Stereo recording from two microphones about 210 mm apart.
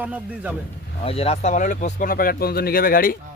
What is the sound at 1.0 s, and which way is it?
Speech, 30° left (ahead or behind).